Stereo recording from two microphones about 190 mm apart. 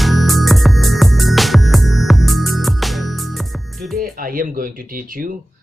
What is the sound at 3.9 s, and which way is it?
Music, 50° right (ahead or behind).